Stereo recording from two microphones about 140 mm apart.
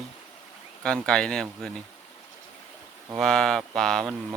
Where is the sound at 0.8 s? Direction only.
5° left (ahead or behind).